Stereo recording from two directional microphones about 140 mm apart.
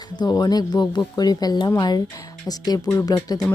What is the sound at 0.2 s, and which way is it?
Speech, 30° left (ahead or behind).